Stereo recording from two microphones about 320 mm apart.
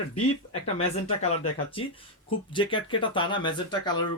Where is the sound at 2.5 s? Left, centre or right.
Centre.